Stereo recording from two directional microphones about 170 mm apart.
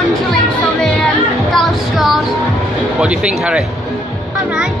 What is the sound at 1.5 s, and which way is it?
Music, centre (ahead or behind).